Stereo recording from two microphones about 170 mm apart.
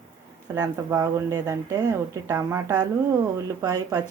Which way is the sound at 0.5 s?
20° right (ahead or behind).